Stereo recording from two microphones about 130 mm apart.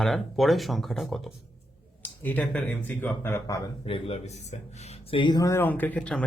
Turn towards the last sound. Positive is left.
turn(degrees=10)  # may be behind; listen again after turning